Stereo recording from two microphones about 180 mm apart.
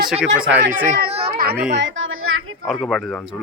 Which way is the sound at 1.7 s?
90° right.